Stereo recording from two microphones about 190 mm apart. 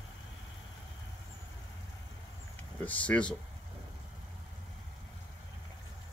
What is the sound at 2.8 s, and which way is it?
Speech, 5° left (ahead or behind).